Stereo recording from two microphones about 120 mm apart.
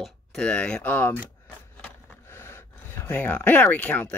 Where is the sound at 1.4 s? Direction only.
15° left (ahead or behind).